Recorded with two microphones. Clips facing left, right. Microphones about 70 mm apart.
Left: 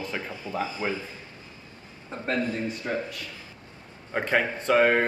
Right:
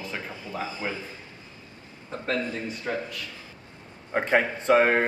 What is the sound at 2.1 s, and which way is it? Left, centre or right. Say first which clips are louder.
Speech: even; left.